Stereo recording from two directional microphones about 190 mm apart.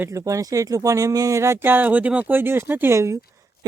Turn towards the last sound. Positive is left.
turn(degrees=-15)  # may be behind; listen again after turning